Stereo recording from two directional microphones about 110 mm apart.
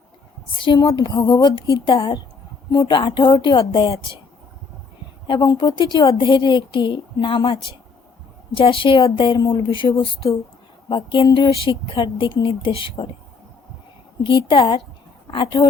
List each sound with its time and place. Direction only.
0.5 s a woman's voice: 50° left (ahead or behind)
1.8 s a woman's voice: 50° left (ahead or behind)
5.3 s a woman's voice: 45° left (ahead or behind)
14.3 s a woman's voice: 50° left (ahead or behind)